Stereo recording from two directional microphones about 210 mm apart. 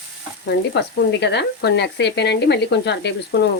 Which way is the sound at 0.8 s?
55° left (ahead or behind).